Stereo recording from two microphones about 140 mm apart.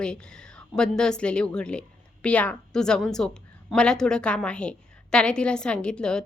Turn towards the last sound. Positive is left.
turn(degrees=5)  # may be behind; listen again after turning